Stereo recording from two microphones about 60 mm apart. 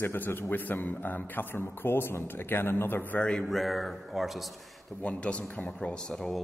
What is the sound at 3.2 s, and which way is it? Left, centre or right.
Speech, centre.